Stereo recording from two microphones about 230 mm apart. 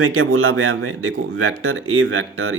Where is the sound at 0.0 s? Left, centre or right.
Right.